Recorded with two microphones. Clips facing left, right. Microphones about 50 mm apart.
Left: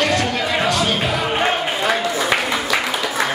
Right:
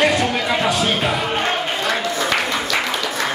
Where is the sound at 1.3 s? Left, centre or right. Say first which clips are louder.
Left 2 dB; centre.